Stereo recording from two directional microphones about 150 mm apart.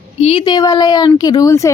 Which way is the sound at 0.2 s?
40° left (ahead or behind).